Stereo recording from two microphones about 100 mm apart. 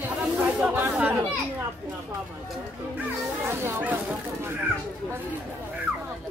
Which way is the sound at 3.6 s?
25° right (ahead or behind).